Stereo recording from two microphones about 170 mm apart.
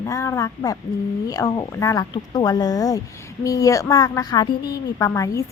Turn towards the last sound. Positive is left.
turn(degrees=20)  # may be behind; listen again after turning